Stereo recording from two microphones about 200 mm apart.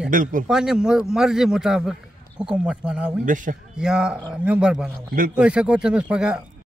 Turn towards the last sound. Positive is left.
turn(degrees=-5)  # may be behind; listen again after turning